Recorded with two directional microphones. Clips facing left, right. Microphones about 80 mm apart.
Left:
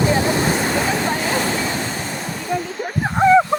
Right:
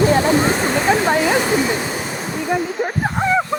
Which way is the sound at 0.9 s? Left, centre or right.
Right.